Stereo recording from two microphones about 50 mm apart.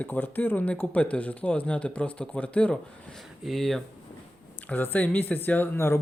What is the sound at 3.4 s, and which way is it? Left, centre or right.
Speech, centre.